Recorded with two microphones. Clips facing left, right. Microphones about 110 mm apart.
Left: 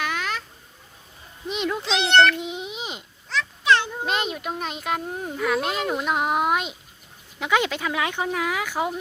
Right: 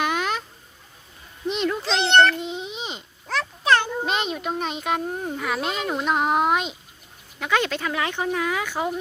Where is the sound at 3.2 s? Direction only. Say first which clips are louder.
Even; 45° right (ahead or behind).